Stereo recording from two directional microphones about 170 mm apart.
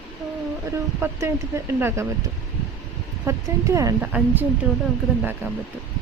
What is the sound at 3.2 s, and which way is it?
Speech, 15° right (ahead or behind).